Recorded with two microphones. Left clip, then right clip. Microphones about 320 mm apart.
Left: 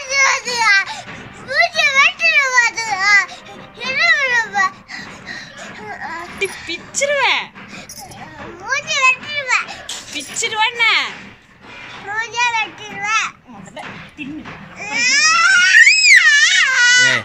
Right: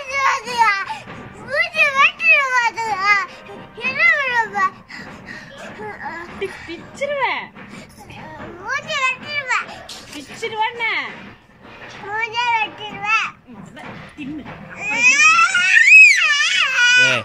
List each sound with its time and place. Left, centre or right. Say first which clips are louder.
0.0 s a sound: left 3 dB; centre
1.5 s children playing: left 3 dB; centre
3.8 s a sound: left 1 dB; centre
6.4 s speech: left 7 dB; left
8.6 s children playing: left 5 dB; centre
10.4 s speech: left 5 dB; left
12.1 s a child's voice: left 1 dB; centre
14.8 s crying: right 2 dB; centre